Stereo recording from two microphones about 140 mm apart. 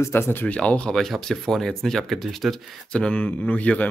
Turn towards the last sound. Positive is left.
turn(degrees=10)  # may be behind; listen again after turning